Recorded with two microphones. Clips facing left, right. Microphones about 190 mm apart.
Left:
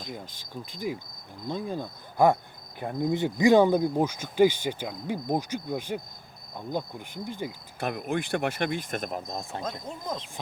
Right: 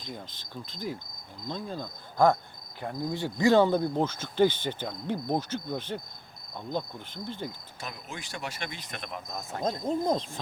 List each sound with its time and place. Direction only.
0.1 s speech: 10° left (ahead or behind)
7.8 s speech: 60° left (ahead or behind); by 9.6 s 35° left (ahead or behind)
9.8 s speech: 35° right (ahead or behind)